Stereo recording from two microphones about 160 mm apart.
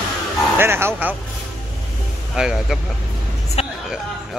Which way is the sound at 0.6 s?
15° right (ahead or behind).